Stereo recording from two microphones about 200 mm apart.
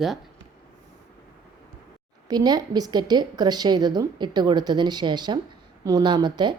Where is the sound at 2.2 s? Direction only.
20° right (ahead or behind).